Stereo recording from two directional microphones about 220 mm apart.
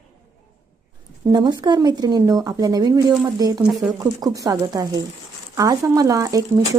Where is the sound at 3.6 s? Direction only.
5° right (ahead or behind).